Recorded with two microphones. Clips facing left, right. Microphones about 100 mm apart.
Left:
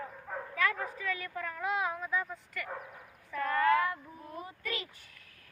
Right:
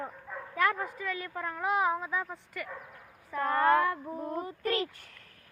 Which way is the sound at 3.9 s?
75° right (ahead or behind).